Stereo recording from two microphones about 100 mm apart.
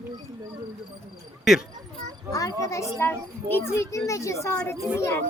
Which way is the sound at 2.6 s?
30° left (ahead or behind).